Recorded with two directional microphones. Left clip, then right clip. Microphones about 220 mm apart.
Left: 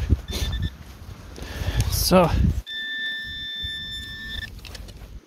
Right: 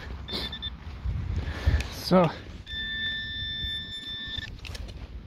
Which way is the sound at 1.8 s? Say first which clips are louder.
Left 5 dB; 15° left (ahead or behind).